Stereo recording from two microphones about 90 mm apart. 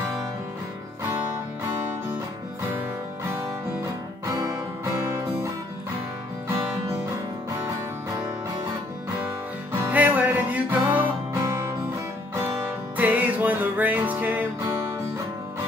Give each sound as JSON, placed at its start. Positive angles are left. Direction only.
{"t": 4.3, "sound": "music", "side_deg": -40}
{"t": 9.7, "sound": "music", "side_deg": -20}
{"t": 11.3, "sound": "music", "side_deg": -30}
{"t": 12.4, "sound": "music", "side_deg": -20}